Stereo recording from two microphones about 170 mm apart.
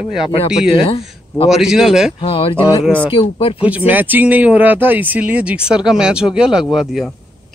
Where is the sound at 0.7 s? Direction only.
35° left (ahead or behind).